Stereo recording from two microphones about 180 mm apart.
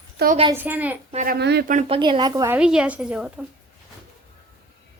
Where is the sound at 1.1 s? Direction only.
50° right (ahead or behind).